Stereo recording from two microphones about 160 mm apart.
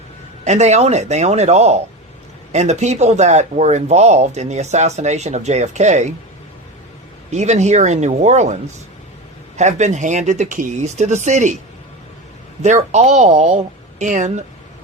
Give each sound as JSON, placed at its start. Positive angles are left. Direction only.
{"t": 0.4, "sound": "speech", "side_deg": -45}
{"t": 7.3, "sound": "speech", "side_deg": -45}
{"t": 9.6, "sound": "speech", "side_deg": -45}
{"t": 12.6, "sound": "speech", "side_deg": -45}